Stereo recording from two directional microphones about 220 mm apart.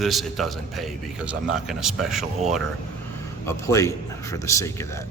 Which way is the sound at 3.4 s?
15° left (ahead or behind).